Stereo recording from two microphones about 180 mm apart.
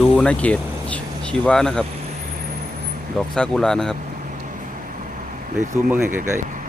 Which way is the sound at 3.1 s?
5° left (ahead or behind).